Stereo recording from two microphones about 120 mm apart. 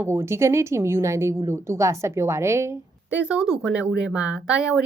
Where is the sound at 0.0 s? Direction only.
20° right (ahead or behind).